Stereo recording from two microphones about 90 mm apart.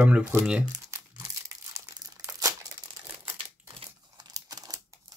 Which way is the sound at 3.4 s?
90° right.